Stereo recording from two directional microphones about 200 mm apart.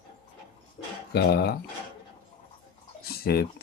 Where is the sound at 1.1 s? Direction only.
50° left (ahead or behind).